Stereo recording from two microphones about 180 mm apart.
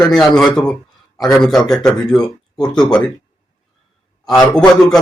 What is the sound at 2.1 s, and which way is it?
Speech, 20° left (ahead or behind).